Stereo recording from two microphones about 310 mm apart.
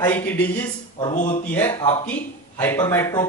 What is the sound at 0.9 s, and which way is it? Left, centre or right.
Speech, left.